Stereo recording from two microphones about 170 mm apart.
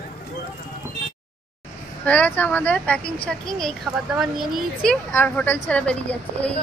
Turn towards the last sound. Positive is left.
turn(degrees=10)  # may be behind; listen again after turning